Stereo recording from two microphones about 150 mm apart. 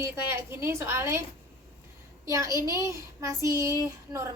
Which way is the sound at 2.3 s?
20° right (ahead or behind).